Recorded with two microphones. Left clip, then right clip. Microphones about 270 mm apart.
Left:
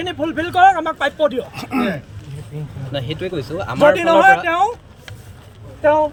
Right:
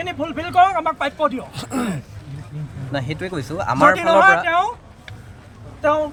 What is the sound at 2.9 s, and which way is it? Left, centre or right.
Speech, centre.